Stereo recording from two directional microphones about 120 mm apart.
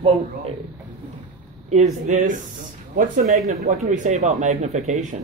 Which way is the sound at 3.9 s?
80° right.